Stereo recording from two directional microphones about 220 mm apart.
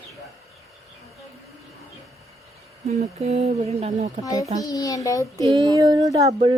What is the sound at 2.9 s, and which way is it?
Speech, 30° right (ahead or behind).